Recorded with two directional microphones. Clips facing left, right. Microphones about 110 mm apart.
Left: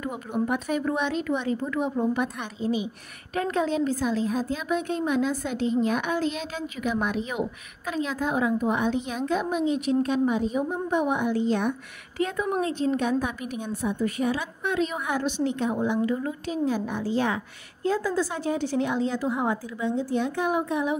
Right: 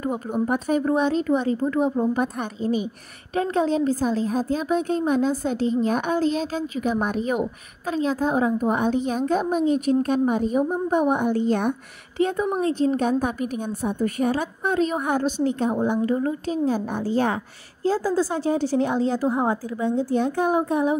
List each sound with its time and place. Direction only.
0.0 s a woman's voice: 40° right (ahead or behind)
3.3 s a woman's voice: 30° right (ahead or behind); by 11.7 s 50° right (ahead or behind)
12.2 s a woman's voice: 25° right (ahead or behind)
12.6 s a woman's voice: 40° right (ahead or behind)
17.8 s a woman's voice: 30° right (ahead or behind)